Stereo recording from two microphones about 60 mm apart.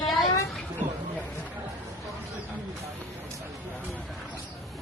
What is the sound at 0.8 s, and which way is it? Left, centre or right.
Speech, right.